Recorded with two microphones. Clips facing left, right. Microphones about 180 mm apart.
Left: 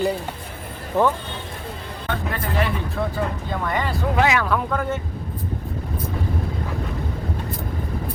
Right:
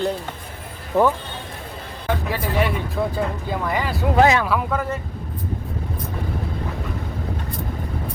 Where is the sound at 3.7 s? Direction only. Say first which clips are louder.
Even; 5° right (ahead or behind).